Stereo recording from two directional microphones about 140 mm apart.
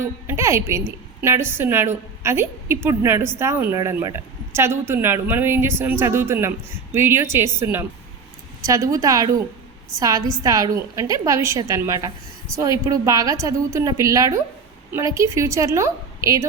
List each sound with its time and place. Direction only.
0.0 s a woman's voice: 20° right (ahead or behind)